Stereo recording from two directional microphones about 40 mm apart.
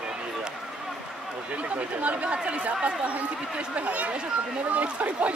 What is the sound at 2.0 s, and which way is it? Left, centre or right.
Speech, right.